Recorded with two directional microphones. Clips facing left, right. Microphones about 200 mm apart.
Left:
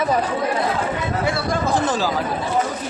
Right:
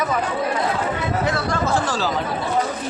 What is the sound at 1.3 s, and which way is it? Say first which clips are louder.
Speech: left 2 dB; 10° left (ahead or behind).